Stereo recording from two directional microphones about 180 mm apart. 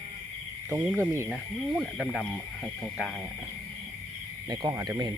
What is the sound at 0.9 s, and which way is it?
Speech, 15° right (ahead or behind).